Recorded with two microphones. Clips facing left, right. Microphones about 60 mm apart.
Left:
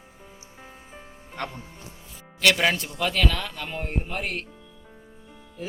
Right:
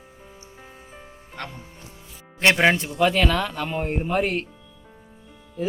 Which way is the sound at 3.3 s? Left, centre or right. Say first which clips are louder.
Right 7 dB; right.